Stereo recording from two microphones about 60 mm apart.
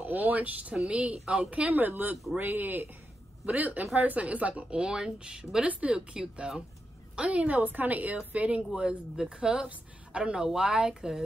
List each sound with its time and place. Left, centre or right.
0.1 s a woman's voice: right
1.8 s speech: right
3.4 s a woman's voice: right; by 11.2 s centre